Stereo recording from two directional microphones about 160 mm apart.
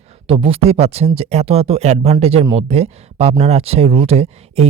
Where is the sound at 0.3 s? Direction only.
35° right (ahead or behind).